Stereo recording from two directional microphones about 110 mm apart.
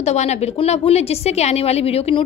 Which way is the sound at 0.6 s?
70° left (ahead or behind).